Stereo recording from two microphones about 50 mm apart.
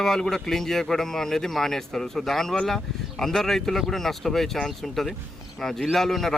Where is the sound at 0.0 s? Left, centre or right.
Centre.